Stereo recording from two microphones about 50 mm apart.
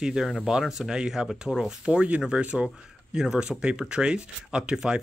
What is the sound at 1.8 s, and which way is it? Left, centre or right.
Speech, right.